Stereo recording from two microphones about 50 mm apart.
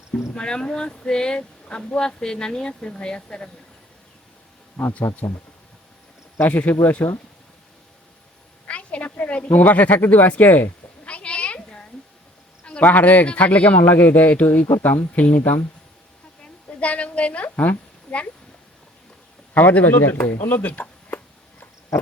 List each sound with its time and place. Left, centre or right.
0.3 s speech: centre
4.8 s speech: centre
6.4 s speech: left
8.6 s a woman's voice: left
11.0 s a sound: left
12.8 s speech: left
13.8 s speech: left
16.4 s a sound: left
18.1 s speech: left
19.5 s speech: left
20.7 s a sound: left